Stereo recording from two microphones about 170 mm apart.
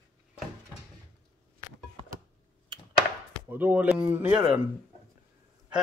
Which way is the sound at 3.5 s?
10° right (ahead or behind).